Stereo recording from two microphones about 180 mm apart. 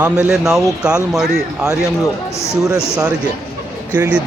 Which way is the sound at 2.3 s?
15° left (ahead or behind).